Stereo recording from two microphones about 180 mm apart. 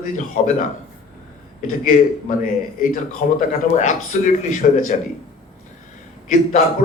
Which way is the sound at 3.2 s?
45° left (ahead or behind).